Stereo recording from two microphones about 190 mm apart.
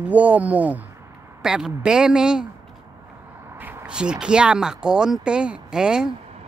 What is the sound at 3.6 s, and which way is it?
Speech, 5° right (ahead or behind).